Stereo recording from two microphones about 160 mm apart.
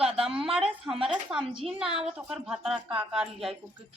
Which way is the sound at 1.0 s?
5° right (ahead or behind).